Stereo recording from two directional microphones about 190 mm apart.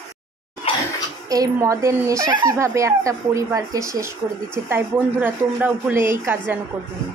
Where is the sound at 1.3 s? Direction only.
20° right (ahead or behind).